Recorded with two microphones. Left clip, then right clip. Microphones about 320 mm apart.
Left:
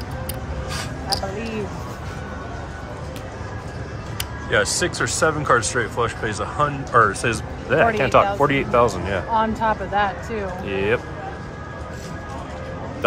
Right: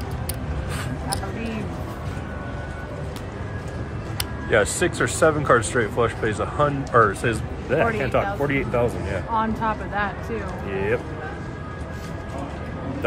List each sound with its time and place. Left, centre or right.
4.5 s speech: centre
9.3 s speech: left
10.7 s speech: centre